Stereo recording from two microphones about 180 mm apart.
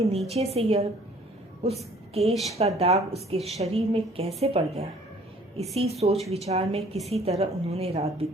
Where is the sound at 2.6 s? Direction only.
35° right (ahead or behind).